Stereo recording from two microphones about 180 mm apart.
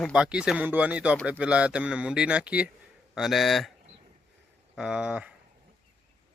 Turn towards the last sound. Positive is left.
turn(degrees=-5)  # may be behind; listen again after turning